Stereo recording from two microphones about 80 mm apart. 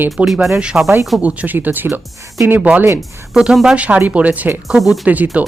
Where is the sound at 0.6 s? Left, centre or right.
Centre.